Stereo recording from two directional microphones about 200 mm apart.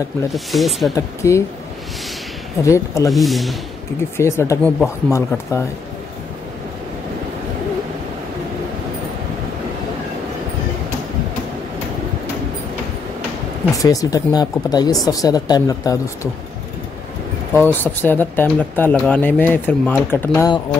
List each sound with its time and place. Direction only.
0.3 s speech: centre (ahead or behind)
0.9 s speech: 15° left (ahead or behind)
2.6 s speech: 15° left (ahead or behind)
3.1 s speech: centre (ahead or behind)
4.2 s speech: 15° left (ahead or behind)
13.7 s speech: 15° left (ahead or behind)
17.6 s speech: 10° left (ahead or behind)